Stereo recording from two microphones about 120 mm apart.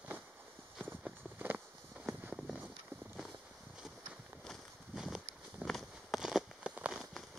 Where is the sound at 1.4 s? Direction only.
15° right (ahead or behind).